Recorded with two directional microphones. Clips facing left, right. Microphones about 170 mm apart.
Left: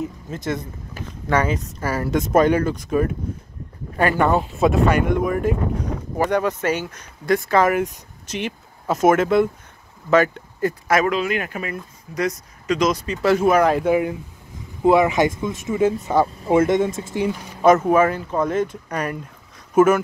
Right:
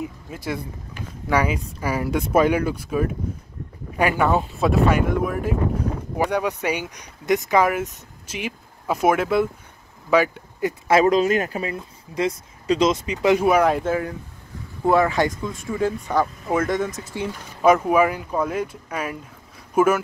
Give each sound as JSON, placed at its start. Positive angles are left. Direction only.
{"t": 0.0, "sound": "speech", "side_deg": -10}
{"t": 10.9, "sound": "speech", "side_deg": -35}
{"t": 13.0, "sound": "speech", "side_deg": -15}
{"t": 13.5, "sound": "speech", "side_deg": 0}
{"t": 13.8, "sound": "speech", "side_deg": 15}
{"t": 17.1, "sound": "speech", "side_deg": 10}
{"t": 17.8, "sound": "speech", "side_deg": -10}